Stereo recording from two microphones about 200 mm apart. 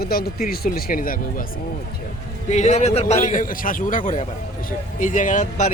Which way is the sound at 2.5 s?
35° left (ahead or behind).